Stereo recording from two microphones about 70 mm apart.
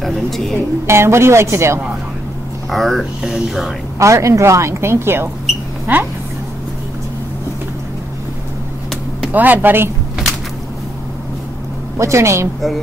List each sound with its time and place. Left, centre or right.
0.0 s speech: centre
0.8 s a woman's voice: right
2.7 s speech: centre
4.0 s speech: right
9.3 s speech: right
12.0 s speech: right